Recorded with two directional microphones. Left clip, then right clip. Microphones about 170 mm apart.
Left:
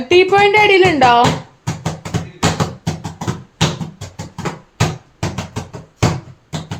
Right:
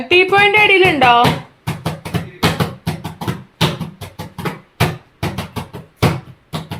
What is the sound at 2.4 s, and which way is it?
Music, 10° left (ahead or behind).